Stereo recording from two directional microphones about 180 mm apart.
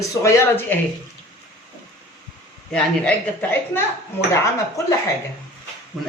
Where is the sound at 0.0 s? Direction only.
15° left (ahead or behind).